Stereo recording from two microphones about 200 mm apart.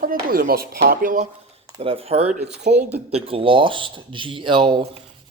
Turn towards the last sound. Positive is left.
turn(degrees=-25)  # may be behind; listen again after turning